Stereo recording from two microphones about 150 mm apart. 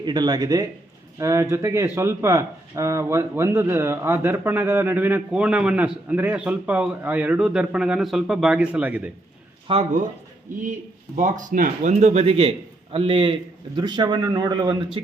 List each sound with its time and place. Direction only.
0.0 s speech: 30° right (ahead or behind); by 9.0 s 10° right (ahead or behind)
9.7 s a man's voice: 35° right (ahead or behind)
10.6 s speech: 55° right (ahead or behind); by 14.8 s 25° right (ahead or behind)